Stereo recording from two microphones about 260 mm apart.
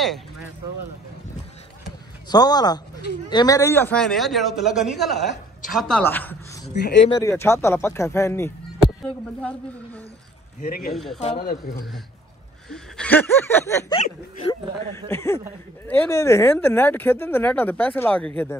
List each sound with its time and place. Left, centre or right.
2.2 s a man's voice: centre
10.6 s a man's voice: left
10.9 s a man's voice: centre
11.3 s a man's voice: left
12.6 s speech: centre